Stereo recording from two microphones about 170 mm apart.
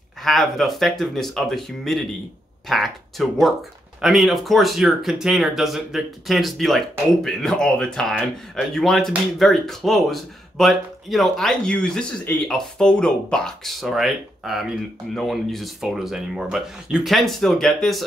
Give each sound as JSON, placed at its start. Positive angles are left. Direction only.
{"t": 0.2, "sound": "speech", "side_deg": 0}